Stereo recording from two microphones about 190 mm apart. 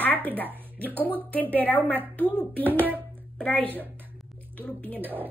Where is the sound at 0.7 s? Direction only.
10° left (ahead or behind).